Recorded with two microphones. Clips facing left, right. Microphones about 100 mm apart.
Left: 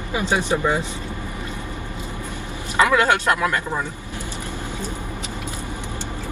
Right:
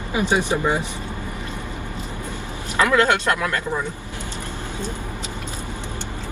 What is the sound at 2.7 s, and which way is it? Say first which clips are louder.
Speech: even; 15° left (ahead or behind).